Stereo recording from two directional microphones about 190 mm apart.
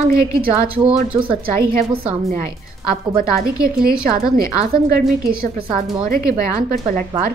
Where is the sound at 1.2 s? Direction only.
25° right (ahead or behind).